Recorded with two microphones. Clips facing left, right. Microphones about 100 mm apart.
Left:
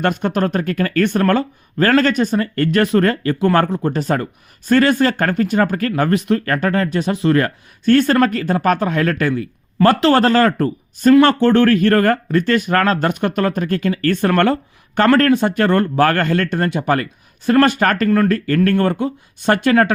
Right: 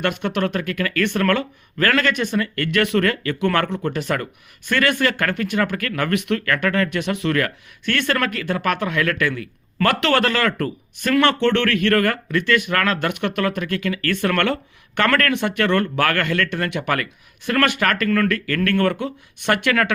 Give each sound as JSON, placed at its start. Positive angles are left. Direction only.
{"t": 0.0, "sound": "speech", "side_deg": 40}